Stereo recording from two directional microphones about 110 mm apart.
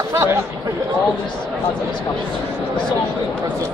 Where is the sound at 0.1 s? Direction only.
25° right (ahead or behind).